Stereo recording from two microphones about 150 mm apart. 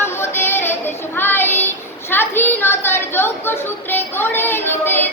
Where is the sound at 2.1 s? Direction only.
15° left (ahead or behind).